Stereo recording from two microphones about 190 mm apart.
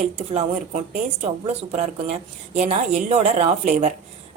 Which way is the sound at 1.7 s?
35° right (ahead or behind).